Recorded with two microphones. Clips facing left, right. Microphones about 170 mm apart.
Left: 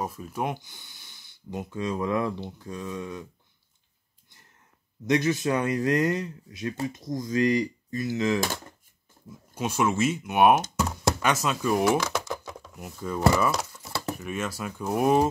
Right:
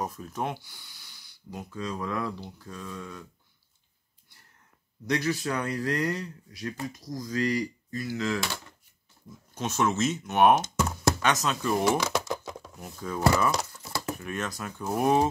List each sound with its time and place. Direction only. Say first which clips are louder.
0.0 s speech: left 2 dB; 5° left (ahead or behind)
5.0 s speech: left 4 dB; 20° left (ahead or behind)
8.4 s speech: left 4 dB; 45° left (ahead or behind)
9.5 s speech: left 1 dB; 10° left (ahead or behind)
12.0 s typing: right 1 dB; 10° right (ahead or behind)
12.7 s speech: left 3 dB; 5° left (ahead or behind)
13.8 s typing: left 1 dB; 30° left (ahead or behind)
14.2 s speech: left 2 dB; 5° left (ahead or behind)